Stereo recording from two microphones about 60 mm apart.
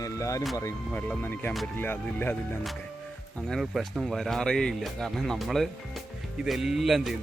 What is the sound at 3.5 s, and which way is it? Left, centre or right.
Speech, centre.